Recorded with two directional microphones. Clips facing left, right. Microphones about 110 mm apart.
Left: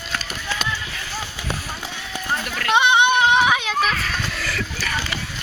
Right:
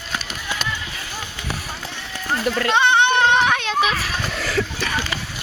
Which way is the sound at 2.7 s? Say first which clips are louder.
Left 1 dB; 15° left (ahead or behind).